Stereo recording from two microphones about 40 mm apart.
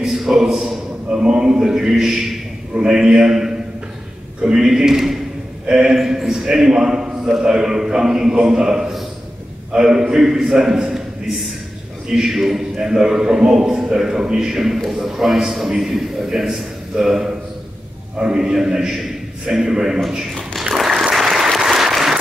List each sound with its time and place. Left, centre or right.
0.0 s a man's voice: centre
12.1 s a man's voice: centre
20.7 s applause: centre